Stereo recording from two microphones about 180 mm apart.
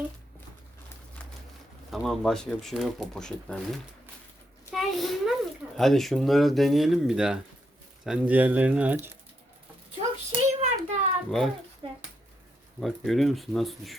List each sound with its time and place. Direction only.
1.9 s a child's voice: centre (ahead or behind)
10.3 s child singing: 40° right (ahead or behind)
11.3 s speech: centre (ahead or behind)
11.8 s speech: 30° right (ahead or behind)
12.8 s speech: centre (ahead or behind)